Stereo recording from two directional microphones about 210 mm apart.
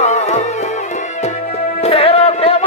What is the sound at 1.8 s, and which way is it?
Music, 30° left (ahead or behind).